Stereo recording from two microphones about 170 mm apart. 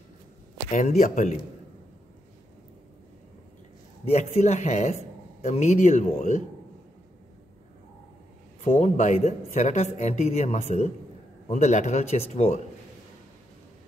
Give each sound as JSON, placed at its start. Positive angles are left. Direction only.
{"t": 0.7, "sound": "speech", "side_deg": 45}
{"t": 4.0, "sound": "a man's voice", "side_deg": 40}
{"t": 8.6, "sound": "a man's voice", "side_deg": 40}